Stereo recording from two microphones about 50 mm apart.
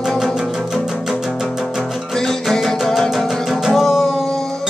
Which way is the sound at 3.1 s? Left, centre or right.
Centre.